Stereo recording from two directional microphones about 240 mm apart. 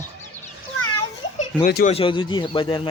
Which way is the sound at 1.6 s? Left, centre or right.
Left.